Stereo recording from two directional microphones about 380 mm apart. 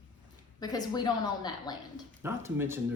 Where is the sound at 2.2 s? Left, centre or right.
Centre.